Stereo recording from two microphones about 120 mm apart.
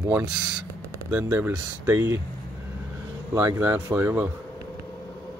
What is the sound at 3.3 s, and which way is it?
Speech, 25° right (ahead or behind).